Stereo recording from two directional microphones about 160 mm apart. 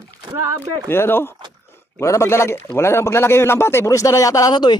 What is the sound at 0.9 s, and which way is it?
A man's voice, 15° left (ahead or behind).